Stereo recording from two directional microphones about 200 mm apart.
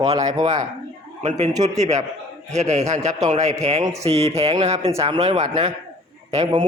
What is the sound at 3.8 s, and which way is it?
Speech, 15° right (ahead or behind).